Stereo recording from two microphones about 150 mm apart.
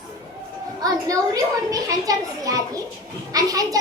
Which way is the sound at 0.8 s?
25° right (ahead or behind).